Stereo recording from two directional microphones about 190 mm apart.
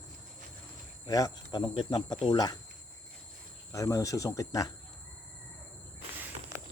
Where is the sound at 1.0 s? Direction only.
20° left (ahead or behind).